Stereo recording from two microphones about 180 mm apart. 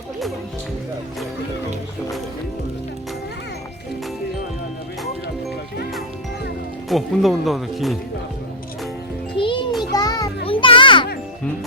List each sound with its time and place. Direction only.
6.8 s speech: centre (ahead or behind)
9.4 s music: 25° left (ahead or behind)